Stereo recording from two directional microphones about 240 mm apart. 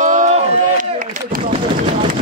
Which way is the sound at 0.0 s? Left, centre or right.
Right.